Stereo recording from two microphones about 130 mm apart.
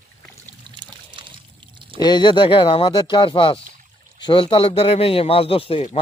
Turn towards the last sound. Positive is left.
turn(degrees=45)  # may be behind; listen again after turning